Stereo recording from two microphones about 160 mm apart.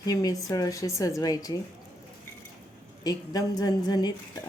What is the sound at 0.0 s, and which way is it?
A woman's voice, 25° left (ahead or behind).